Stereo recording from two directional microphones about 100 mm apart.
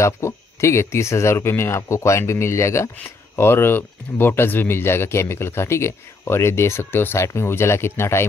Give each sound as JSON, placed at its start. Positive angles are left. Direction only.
{"t": 0.0, "sound": "speech", "side_deg": 30}